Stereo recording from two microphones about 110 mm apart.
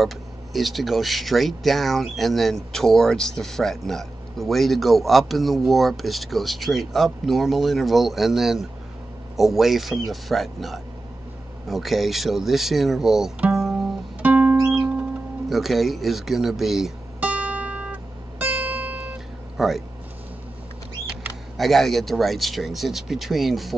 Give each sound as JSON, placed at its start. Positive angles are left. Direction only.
{"t": 0.0, "sound": "speech", "side_deg": 0}
{"t": 14.2, "sound": "music", "side_deg": -15}
{"t": 15.5, "sound": "speech", "side_deg": 0}
{"t": 17.2, "sound": "music", "side_deg": -15}
{"t": 19.5, "sound": "speech", "side_deg": 0}
{"t": 21.5, "sound": "speech", "side_deg": 0}